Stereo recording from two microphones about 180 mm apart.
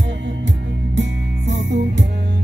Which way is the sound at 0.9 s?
75° right (ahead or behind).